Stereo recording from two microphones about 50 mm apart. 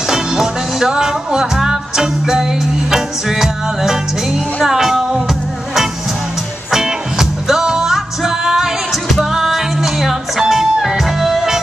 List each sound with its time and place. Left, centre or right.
0.1 s music: centre
6.7 s music: centre